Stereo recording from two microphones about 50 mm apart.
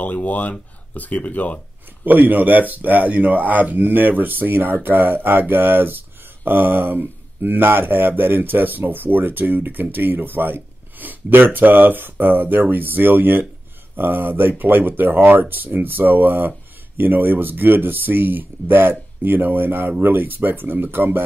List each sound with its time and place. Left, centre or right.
0.0 s speech: left
2.0 s speech: right